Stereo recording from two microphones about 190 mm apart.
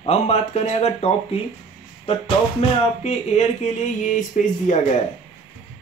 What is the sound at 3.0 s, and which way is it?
Speech, 35° left (ahead or behind).